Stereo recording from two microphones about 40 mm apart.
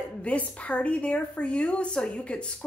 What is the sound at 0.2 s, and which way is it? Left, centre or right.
A woman's voice, left.